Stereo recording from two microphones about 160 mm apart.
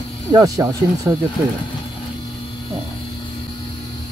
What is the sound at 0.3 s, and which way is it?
Speech, 20° right (ahead or behind).